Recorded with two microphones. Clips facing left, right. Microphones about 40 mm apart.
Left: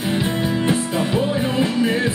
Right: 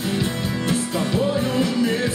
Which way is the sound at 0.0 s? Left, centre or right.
Left.